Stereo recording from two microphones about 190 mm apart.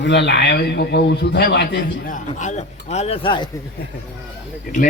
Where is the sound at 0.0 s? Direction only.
65° left (ahead or behind).